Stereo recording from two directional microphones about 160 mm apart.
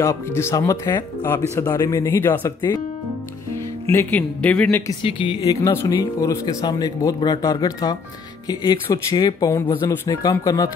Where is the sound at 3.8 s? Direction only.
15° left (ahead or behind).